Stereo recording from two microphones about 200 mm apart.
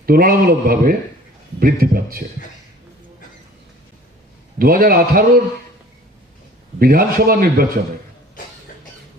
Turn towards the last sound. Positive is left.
turn(degrees=-45)  # may be behind; listen again after turning